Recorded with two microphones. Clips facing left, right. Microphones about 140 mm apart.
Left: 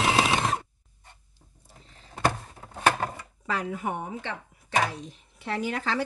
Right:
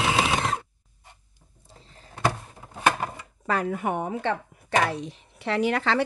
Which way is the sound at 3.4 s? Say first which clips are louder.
Right 4 dB; 55° right (ahead or behind).